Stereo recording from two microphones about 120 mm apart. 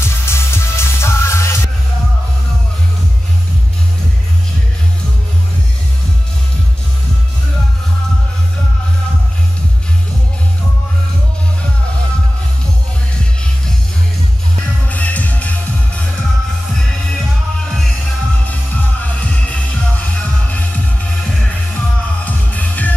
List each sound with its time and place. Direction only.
0.0 s music: 20° left (ahead or behind)
14.9 s music: 10° left (ahead or behind)
17.6 s music: 5° left (ahead or behind)